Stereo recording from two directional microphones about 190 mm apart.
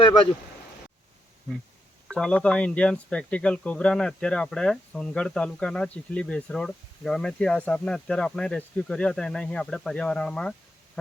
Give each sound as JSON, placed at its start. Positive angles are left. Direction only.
{"t": 0.0, "sound": "speech", "side_deg": 25}
{"t": 2.0, "sound": "speech", "side_deg": 5}